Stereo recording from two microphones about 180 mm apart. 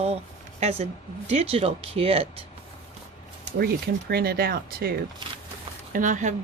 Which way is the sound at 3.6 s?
60° right (ahead or behind).